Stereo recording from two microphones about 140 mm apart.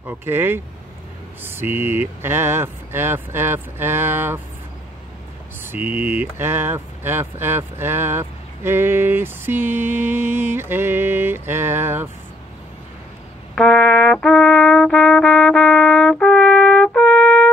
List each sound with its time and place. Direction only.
0.0 s speech: 15° right (ahead or behind)
5.6 s speech: 15° right (ahead or behind)
13.6 s brass instrument: 10° left (ahead or behind)